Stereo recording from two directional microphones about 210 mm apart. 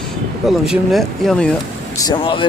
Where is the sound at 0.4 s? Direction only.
Centre (ahead or behind).